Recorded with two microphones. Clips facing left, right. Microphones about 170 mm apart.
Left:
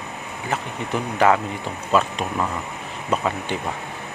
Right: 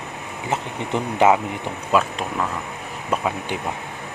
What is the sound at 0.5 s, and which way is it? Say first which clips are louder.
Speech: right 1 dB; 20° right (ahead or behind).